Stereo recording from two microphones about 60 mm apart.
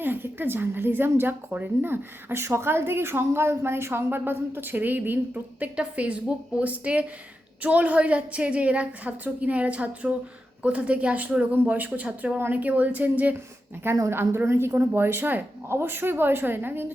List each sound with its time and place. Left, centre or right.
0.0 s a woman's voice: right
14.1 s a woman's voice: right